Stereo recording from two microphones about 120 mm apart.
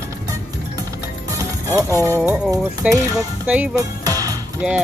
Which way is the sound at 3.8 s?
30° right (ahead or behind).